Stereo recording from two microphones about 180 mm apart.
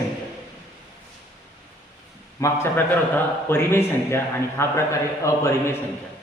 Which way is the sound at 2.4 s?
15° left (ahead or behind).